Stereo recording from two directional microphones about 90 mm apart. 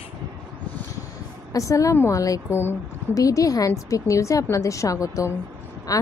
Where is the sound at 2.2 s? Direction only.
40° left (ahead or behind).